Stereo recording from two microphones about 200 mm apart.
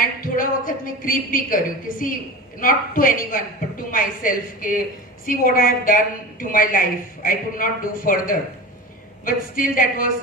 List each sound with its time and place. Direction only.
0.2 s a woman's voice: 45° left (ahead or behind)